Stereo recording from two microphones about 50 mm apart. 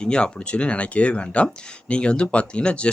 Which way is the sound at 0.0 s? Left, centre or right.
Centre.